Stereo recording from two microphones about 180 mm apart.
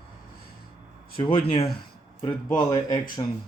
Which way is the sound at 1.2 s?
30° left (ahead or behind).